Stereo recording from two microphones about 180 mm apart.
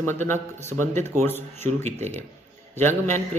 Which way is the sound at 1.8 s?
40° right (ahead or behind).